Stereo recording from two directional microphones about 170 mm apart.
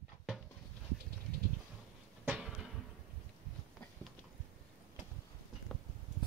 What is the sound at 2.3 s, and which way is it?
Music, 5° right (ahead or behind).